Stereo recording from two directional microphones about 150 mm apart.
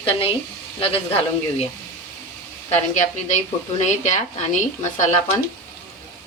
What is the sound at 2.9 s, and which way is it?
Speech, 50° left (ahead or behind).